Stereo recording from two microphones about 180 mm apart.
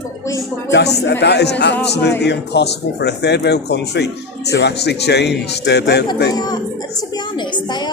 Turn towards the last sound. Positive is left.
turn(degrees=25)  # may be behind; listen again after turning